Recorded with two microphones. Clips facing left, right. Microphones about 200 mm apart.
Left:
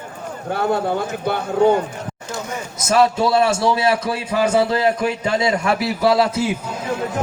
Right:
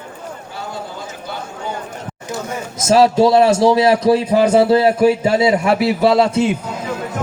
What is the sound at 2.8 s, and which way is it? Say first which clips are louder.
Speech: right 5 dB; 30° right (ahead or behind).